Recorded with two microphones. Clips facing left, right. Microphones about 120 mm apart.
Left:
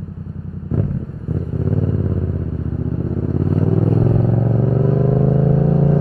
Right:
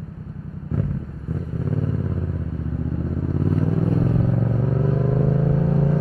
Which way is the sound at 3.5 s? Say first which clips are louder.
Left 5 dB; 30° left (ahead or behind).